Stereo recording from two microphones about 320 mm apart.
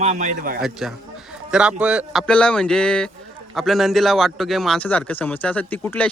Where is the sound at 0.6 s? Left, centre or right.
Centre.